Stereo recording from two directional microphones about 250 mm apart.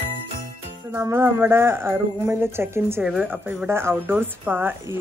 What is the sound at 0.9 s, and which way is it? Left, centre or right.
Speech, centre.